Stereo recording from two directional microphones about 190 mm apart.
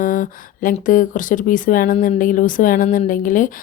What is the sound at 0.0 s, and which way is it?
Speech, 45° left (ahead or behind).